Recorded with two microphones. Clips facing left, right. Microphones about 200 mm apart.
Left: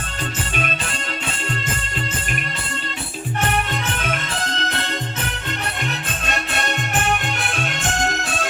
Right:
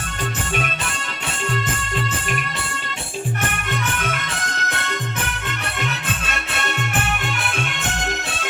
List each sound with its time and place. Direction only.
3.9 s music: 30° left (ahead or behind)